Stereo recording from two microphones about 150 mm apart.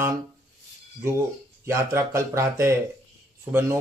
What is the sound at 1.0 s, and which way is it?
Speech, 15° right (ahead or behind).